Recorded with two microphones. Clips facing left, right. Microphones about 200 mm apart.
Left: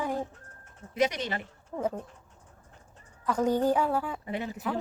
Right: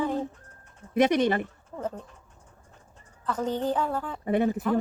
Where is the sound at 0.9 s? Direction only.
55° right (ahead or behind).